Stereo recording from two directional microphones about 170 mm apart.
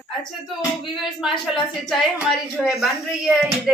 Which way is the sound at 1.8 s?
Centre (ahead or behind).